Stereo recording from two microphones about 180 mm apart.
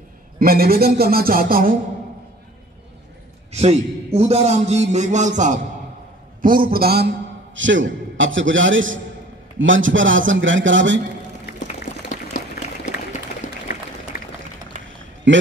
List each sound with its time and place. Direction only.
0.4 s speech: 55° right (ahead or behind)
3.5 s a man's voice: 35° right (ahead or behind); by 7.1 s 60° right (ahead or behind)
7.5 s a man's voice: 90° right
11.6 s boiling: 45° left (ahead or behind)
14.1 s a sound: 55° left (ahead or behind)
14.7 s a sound: 45° right (ahead or behind)
15.3 s a man's voice: 90° right